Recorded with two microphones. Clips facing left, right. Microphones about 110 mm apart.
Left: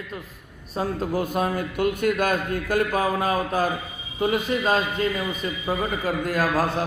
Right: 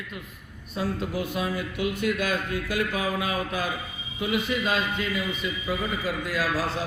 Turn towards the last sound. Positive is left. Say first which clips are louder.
# left 5 dB
turn(degrees=50)  # may be behind; listen again after turning